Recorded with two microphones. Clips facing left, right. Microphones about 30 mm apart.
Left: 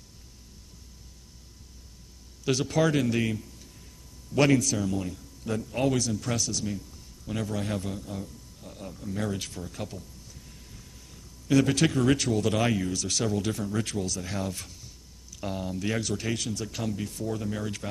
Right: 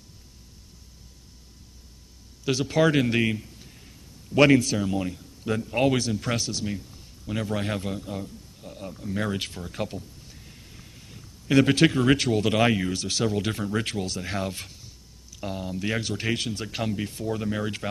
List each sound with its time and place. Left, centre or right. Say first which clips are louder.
2.4 s speech: right 3 dB; centre
8.6 s speech: right 3 dB; centre
9.2 s speech: right 3 dB; right
15.4 s speech: right 1 dB; centre; by 17.8 s right